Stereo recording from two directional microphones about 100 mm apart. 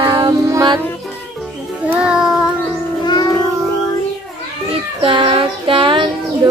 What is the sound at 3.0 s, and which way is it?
Child singing, 45° left (ahead or behind).